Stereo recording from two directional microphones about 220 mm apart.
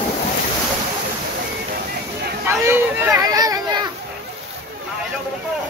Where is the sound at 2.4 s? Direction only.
10° right (ahead or behind).